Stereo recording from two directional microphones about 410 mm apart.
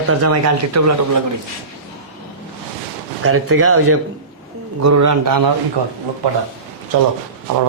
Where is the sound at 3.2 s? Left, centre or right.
Right.